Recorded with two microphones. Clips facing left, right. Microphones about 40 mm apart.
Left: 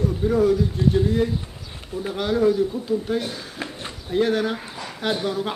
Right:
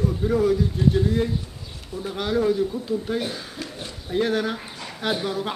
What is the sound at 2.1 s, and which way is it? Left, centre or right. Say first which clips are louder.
Speech: left 2 dB; centre.